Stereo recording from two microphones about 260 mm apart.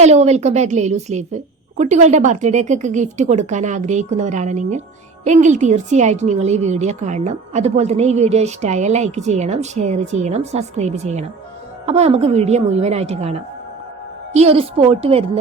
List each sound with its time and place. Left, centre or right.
0.0 s a woman's voice: right